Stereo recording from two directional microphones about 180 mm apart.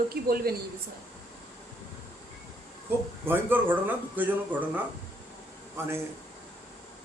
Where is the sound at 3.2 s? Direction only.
10° right (ahead or behind).